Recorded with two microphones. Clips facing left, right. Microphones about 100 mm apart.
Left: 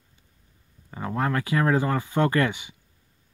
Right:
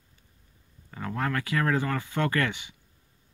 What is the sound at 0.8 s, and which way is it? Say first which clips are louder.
Speech: left 4 dB; 25° left (ahead or behind).